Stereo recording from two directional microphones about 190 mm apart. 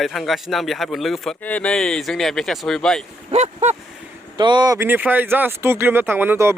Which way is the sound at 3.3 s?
35° right (ahead or behind).